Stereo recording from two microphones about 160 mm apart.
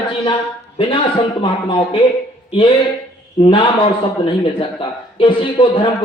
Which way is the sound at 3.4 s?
30° left (ahead or behind).